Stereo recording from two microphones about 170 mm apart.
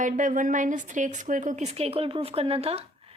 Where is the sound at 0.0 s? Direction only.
50° right (ahead or behind).